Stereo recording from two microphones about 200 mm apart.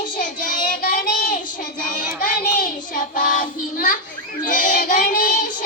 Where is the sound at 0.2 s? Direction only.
40° left (ahead or behind).